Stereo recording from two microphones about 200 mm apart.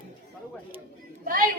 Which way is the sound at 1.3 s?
45° right (ahead or behind).